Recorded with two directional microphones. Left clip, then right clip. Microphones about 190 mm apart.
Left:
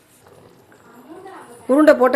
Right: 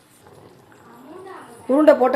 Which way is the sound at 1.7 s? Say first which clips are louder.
Left 2 dB; 20° left (ahead or behind).